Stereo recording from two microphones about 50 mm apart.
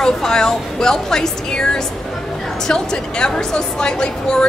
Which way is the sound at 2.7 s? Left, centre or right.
Centre.